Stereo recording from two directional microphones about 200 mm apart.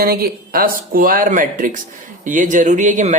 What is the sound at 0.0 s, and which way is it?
Speech, 50° right (ahead or behind).